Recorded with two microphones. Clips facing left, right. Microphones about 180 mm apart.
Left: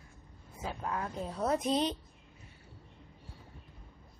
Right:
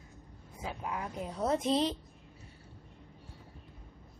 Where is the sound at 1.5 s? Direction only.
25° right (ahead or behind).